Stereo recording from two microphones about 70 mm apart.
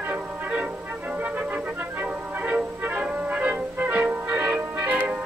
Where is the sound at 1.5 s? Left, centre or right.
Right.